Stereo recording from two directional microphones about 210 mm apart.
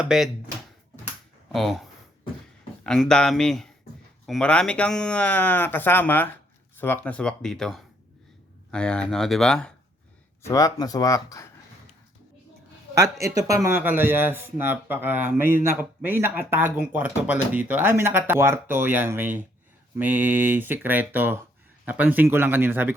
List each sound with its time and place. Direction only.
0.0 s speech: centre (ahead or behind)
1.5 s speech: centre (ahead or behind)
10.4 s speech: 15° left (ahead or behind)
12.9 s speech: 15° right (ahead or behind)